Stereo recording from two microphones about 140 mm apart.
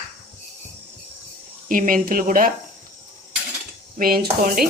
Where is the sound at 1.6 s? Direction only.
75° right (ahead or behind).